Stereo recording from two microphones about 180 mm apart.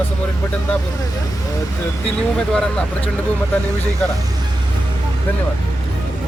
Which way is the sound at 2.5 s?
5° left (ahead or behind).